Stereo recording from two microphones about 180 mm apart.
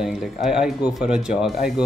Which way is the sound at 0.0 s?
5° right (ahead or behind).